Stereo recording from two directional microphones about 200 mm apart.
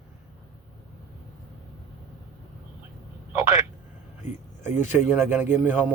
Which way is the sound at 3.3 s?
15° right (ahead or behind).